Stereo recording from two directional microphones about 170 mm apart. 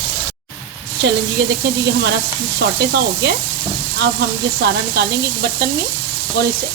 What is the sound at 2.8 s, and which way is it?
Sizzle, 80° right.